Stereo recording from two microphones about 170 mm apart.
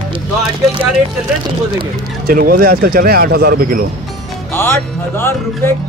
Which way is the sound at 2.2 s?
60° right (ahead or behind).